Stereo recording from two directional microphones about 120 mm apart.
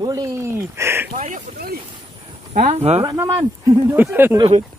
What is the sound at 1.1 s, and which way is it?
Speech, 75° right (ahead or behind).